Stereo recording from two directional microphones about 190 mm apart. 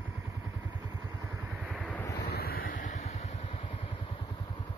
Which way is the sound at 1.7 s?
Centre (ahead or behind).